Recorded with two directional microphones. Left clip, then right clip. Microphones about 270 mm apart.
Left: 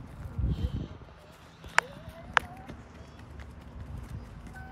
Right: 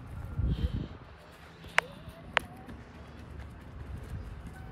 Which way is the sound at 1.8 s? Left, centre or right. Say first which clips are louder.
Left 2 dB; centre.